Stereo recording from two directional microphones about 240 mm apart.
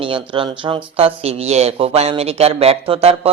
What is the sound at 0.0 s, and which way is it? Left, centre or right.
A man's voice, right.